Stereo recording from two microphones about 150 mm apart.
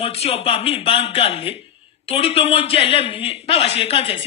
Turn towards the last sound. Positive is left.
turn(degrees=40)  # may be behind; listen again after turning